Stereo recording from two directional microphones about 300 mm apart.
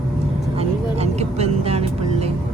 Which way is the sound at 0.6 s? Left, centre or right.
Right.